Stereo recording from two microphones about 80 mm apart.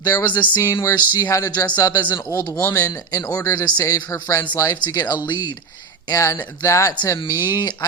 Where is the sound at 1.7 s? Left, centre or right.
Left.